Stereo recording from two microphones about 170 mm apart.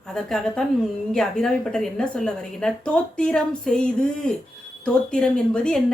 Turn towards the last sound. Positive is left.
turn(degrees=5)  # may be behind; listen again after turning